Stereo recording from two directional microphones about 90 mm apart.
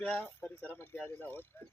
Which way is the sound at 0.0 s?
20° left (ahead or behind).